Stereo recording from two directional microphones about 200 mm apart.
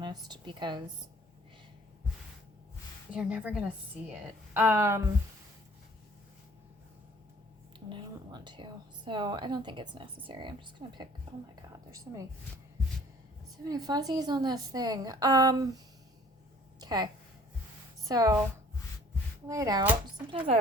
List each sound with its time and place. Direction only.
0.0 s speech: 20° right (ahead or behind)
3.1 s a woman's voice: 5° right (ahead or behind)
7.9 s a woman's voice: 25° right (ahead or behind)
13.7 s a woman's voice: 20° right (ahead or behind)
16.8 s a woman's voice: 20° right (ahead or behind)
19.5 s speech: 15° right (ahead or behind)